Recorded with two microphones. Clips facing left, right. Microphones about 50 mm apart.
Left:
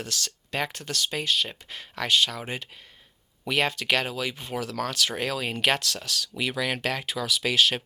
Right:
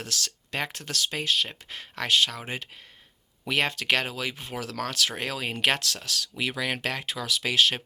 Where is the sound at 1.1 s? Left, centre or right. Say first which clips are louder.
Even; right.